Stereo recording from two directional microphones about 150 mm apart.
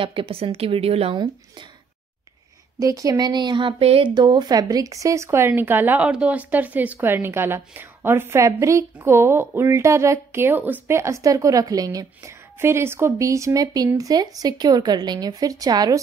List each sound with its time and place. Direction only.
0.0 s a woman's voice: 35° right (ahead or behind)
2.8 s speech: 25° right (ahead or behind)